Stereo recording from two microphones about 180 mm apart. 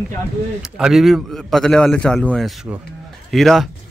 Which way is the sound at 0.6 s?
5° right (ahead or behind).